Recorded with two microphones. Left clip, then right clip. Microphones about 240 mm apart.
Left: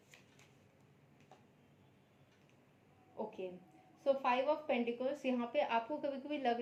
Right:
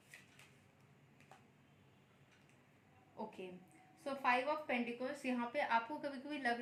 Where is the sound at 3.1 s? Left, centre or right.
Right.